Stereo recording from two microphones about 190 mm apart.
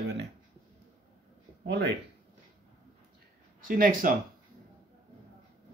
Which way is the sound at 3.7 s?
45° right (ahead or behind).